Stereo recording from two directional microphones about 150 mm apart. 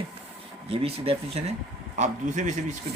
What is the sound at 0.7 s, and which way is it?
Speech, 40° right (ahead or behind).